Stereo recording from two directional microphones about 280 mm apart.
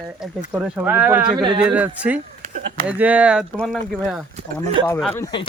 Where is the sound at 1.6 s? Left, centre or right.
Centre.